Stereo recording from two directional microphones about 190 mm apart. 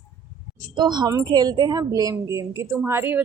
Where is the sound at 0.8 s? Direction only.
25° right (ahead or behind).